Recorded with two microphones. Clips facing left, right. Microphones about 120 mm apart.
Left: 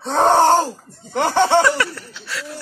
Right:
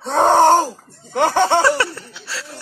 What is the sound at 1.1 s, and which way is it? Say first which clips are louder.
Laughter: even; 10° right (ahead or behind).